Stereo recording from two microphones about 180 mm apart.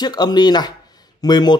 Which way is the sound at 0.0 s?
25° left (ahead or behind).